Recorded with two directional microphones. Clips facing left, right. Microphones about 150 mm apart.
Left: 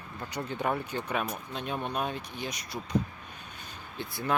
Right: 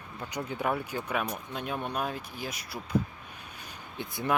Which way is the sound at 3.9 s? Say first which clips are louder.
Right 1 dB; 20° right (ahead or behind).